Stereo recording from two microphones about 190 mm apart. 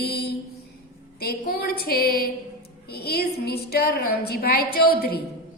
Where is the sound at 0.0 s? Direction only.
55° left (ahead or behind).